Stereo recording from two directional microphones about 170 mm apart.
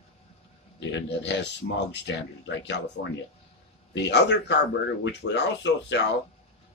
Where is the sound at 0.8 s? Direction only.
90° left.